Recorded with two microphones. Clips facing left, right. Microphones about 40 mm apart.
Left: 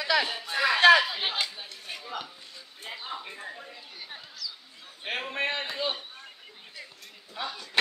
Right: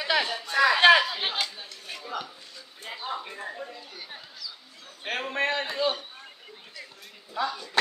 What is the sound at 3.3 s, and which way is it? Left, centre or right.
Speech, centre.